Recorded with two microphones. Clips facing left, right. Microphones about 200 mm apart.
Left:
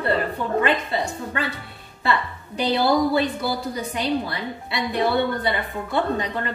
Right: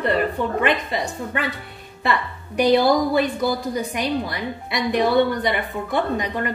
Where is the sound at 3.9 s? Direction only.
15° right (ahead or behind).